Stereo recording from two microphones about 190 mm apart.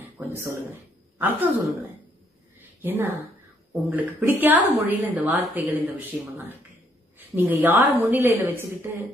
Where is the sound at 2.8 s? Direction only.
10° right (ahead or behind).